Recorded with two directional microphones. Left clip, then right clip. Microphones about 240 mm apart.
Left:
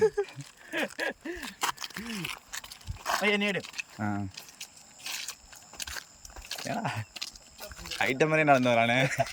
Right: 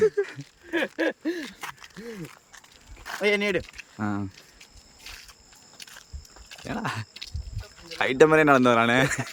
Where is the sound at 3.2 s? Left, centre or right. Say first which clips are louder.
Right 5 dB; centre.